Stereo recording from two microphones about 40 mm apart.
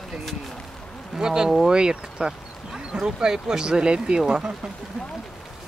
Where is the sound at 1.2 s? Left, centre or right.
Centre.